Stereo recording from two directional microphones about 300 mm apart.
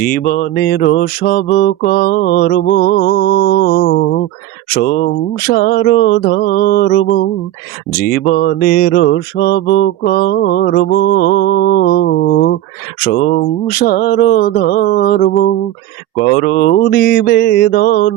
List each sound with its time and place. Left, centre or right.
0.0 s mantra: left
8.3 s mantra: left